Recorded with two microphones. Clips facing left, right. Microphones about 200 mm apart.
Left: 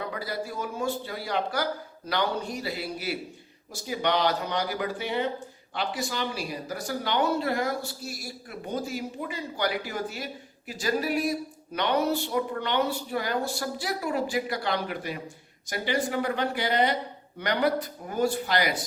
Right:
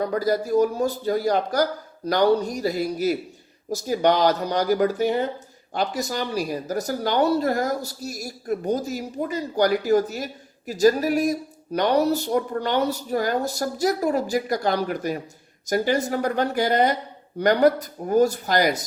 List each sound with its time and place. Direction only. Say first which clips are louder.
0.0 s speech: right 10 dB; 45° right (ahead or behind)